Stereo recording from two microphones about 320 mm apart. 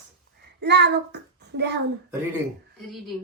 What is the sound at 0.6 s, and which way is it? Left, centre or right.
Child singing, right.